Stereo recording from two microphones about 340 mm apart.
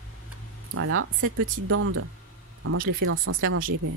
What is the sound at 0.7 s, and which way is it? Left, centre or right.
Speech, right.